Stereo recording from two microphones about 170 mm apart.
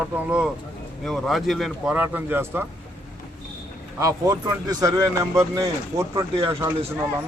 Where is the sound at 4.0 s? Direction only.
20° right (ahead or behind).